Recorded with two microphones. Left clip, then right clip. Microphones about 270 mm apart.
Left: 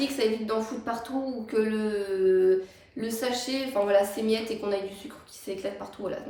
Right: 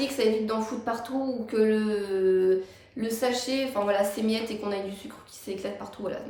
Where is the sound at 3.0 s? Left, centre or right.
Centre.